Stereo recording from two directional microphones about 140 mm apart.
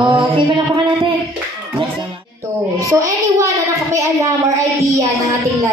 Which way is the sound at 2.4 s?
25° right (ahead or behind).